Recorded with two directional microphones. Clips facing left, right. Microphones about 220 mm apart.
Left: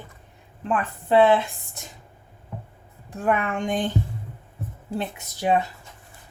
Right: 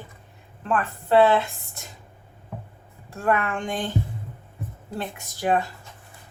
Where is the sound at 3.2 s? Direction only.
20° left (ahead or behind).